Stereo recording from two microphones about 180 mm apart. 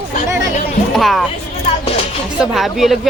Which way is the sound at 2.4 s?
Centre (ahead or behind).